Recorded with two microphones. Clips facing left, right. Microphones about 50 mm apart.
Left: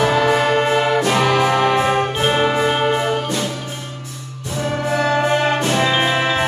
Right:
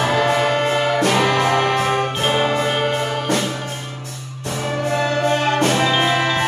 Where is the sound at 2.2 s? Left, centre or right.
Centre.